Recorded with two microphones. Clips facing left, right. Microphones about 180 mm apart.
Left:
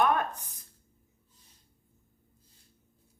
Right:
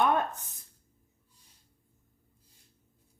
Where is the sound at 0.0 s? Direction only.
25° right (ahead or behind).